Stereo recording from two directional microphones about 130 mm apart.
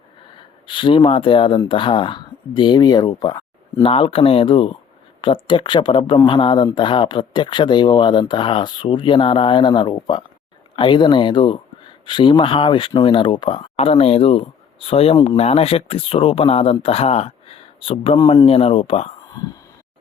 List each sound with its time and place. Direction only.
0.3 s speech: 40° left (ahead or behind)
3.2 s a sound: 30° left (ahead or behind)
3.8 s speech: 45° left (ahead or behind)